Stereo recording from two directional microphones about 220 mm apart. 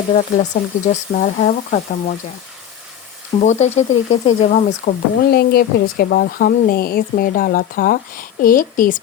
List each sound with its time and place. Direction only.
0.1 s speech: 30° left (ahead or behind)
3.4 s speech: 30° left (ahead or behind)